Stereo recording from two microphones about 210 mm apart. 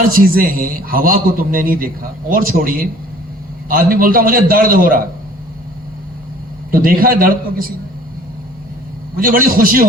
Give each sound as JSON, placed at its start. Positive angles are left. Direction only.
{"t": 0.1, "sound": "a man's voice", "side_deg": -45}
{"t": 6.7, "sound": "a man's voice", "side_deg": -45}
{"t": 9.1, "sound": "a man's voice", "side_deg": -45}